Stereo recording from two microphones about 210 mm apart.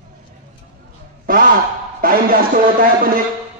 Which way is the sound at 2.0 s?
45° right (ahead or behind).